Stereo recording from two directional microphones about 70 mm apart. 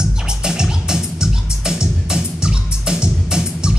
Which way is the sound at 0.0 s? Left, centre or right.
Centre.